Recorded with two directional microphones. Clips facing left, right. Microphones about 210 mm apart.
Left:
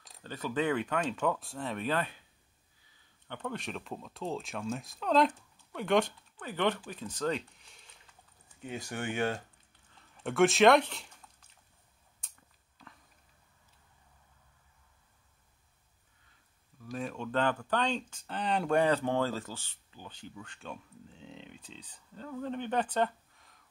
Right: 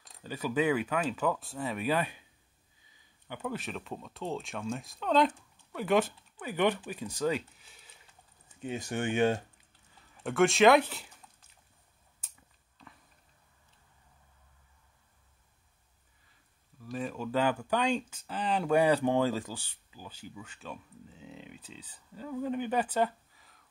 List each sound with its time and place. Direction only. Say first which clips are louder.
0.2 s speech: right 3 dB; 10° right (ahead or behind)
3.3 s speech: right 1 dB; 5° right (ahead or behind)
8.6 s speech: right 4 dB; 20° right (ahead or behind)
9.9 s speech: even; centre (ahead or behind)
12.2 s a sound: even; 5° right (ahead or behind)
16.8 s speech: right 2 dB; centre (ahead or behind)